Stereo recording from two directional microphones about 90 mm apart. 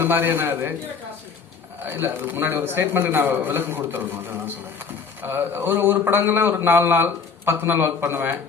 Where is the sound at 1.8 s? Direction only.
25° right (ahead or behind).